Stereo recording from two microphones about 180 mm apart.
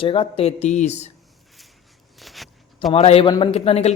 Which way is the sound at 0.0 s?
30° left (ahead or behind).